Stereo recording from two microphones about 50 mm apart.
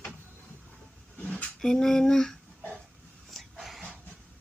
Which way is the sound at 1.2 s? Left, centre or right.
Left.